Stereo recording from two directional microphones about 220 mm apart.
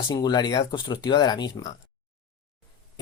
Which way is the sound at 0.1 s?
20° left (ahead or behind).